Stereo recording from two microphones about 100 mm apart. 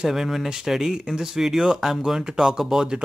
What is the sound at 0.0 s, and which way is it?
Speech, 5° right (ahead or behind).